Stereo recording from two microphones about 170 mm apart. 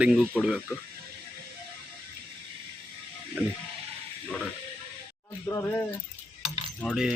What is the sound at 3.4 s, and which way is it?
Speech, 10° right (ahead or behind).